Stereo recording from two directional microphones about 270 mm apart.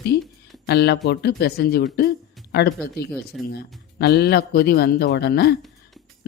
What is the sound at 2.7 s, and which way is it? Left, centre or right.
Speech, centre.